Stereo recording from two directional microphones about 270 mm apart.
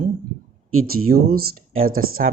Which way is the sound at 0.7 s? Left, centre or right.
Right.